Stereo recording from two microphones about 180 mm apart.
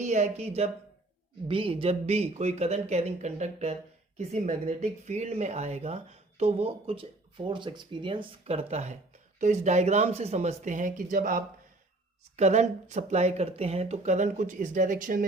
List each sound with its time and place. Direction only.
0.0 s speech: 40° right (ahead or behind)